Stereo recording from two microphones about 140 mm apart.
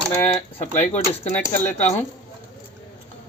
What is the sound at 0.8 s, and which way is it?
Speech, 50° left (ahead or behind).